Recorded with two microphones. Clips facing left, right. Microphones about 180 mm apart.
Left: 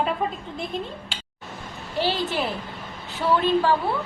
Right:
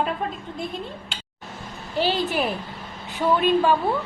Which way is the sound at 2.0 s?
15° right (ahead or behind).